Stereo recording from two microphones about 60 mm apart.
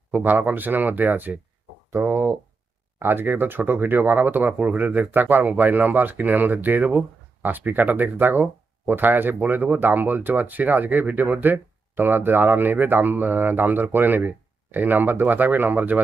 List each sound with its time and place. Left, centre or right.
0.1 s speech: right
1.9 s speech: right